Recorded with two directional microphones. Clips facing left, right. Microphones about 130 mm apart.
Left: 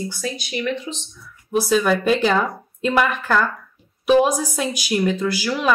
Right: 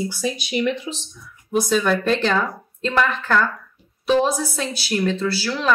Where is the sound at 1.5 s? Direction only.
5° left (ahead or behind).